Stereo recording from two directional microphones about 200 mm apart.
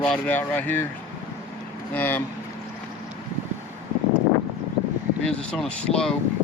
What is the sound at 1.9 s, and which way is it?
Speech, 10° left (ahead or behind).